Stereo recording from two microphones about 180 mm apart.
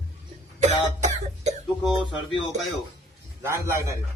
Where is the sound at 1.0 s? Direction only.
40° right (ahead or behind).